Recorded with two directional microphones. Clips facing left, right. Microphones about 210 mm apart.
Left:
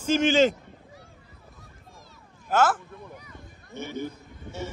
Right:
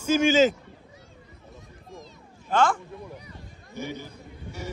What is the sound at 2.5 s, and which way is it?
Speech, 5° left (ahead or behind).